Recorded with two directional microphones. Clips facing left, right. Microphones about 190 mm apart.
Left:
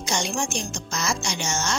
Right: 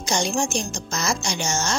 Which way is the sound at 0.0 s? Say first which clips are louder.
Right 3 dB; 40° right (ahead or behind).